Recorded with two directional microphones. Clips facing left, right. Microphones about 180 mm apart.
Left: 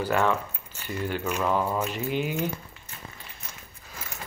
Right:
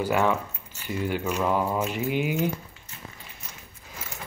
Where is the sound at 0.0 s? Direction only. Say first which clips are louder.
Right 1 dB; 10° right (ahead or behind).